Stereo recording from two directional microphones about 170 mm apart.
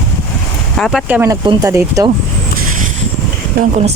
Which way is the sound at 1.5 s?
20° right (ahead or behind).